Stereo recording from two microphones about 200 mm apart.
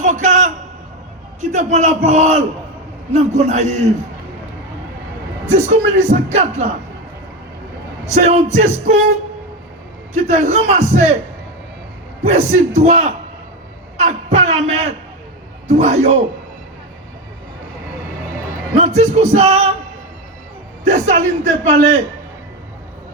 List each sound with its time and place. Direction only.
0.0 s a sound: 40° right (ahead or behind)
1.4 s speech: 35° right (ahead or behind)
5.5 s speech: 35° right (ahead or behind)
8.1 s speech: 35° right (ahead or behind)
10.2 s speech: 35° right (ahead or behind)
12.2 s a man's voice: 35° right (ahead or behind)
18.8 s speech: 35° right (ahead or behind)
20.8 s speech: 35° right (ahead or behind)